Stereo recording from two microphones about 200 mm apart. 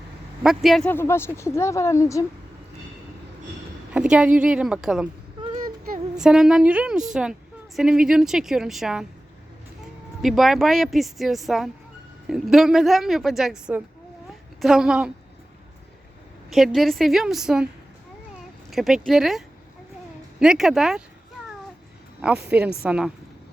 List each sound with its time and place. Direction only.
0.4 s a woman's voice: centre (ahead or behind); by 2.2 s 15° left (ahead or behind)
3.9 s speech: 5° right (ahead or behind)
5.5 s a sound: 45° right (ahead or behind)
6.1 s speech: 5° right (ahead or behind)
10.2 s speech: centre (ahead or behind)
16.5 s speech: centre (ahead or behind)
18.7 s speech: centre (ahead or behind)
20.4 s speech: 5° right (ahead or behind)
22.4 s a woman's voice: 5° right (ahead or behind)